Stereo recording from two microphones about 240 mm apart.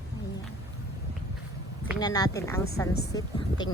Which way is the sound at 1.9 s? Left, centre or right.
Centre.